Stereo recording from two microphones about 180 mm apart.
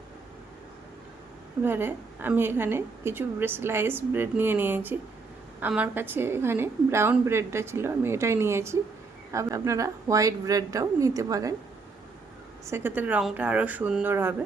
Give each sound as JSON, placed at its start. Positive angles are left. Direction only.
{"t": 1.6, "sound": "a woman's voice", "side_deg": -10}
{"t": 12.6, "sound": "a woman's voice", "side_deg": -10}